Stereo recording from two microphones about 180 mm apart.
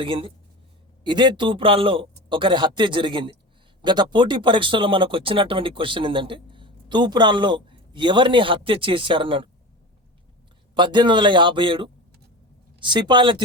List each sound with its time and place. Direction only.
0.0 s speech: 30° right (ahead or behind)
10.8 s speech: 25° right (ahead or behind)